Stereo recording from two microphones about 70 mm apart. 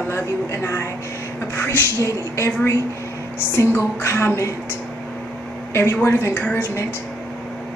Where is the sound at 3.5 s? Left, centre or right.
Left.